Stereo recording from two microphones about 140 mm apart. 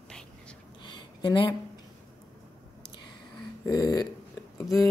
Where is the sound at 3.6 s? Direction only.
25° left (ahead or behind).